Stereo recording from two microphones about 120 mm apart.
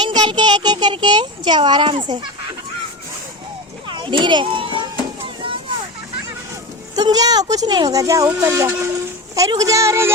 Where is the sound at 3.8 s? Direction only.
45° right (ahead or behind).